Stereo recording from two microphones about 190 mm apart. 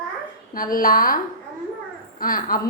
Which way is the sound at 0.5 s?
50° left (ahead or behind).